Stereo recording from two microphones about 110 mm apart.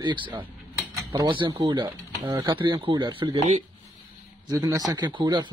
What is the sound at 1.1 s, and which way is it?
Speech, 45° right (ahead or behind).